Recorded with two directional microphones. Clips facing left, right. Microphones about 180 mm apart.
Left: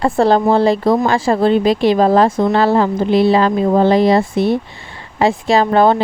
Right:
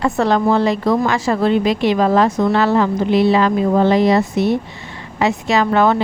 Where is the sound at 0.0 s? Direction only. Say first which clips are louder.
Left 3 dB; 30° left (ahead or behind).